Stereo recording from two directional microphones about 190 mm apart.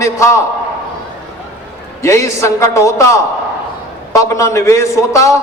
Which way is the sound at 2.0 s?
15° left (ahead or behind).